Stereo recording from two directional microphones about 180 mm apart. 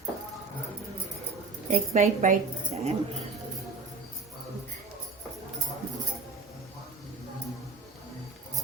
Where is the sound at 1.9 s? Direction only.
40° right (ahead or behind).